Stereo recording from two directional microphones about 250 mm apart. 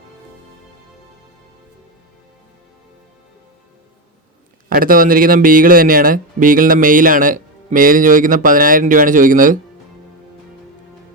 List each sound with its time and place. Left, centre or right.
4.7 s speech: right